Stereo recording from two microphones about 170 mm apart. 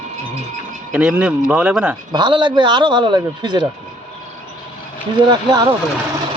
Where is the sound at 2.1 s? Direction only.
25° right (ahead or behind).